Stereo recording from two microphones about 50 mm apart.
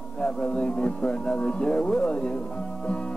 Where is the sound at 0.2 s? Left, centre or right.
Centre.